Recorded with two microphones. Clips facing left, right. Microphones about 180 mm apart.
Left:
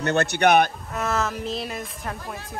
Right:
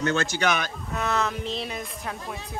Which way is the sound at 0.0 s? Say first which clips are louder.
Left 4 dB; 65° left (ahead or behind).